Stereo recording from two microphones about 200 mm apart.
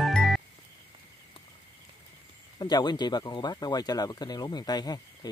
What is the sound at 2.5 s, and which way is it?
Speech, 20° left (ahead or behind).